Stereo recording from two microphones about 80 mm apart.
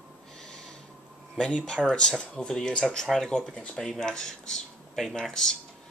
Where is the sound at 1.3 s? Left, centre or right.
Centre.